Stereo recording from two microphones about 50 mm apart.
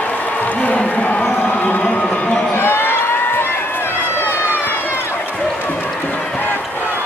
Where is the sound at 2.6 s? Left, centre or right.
Left.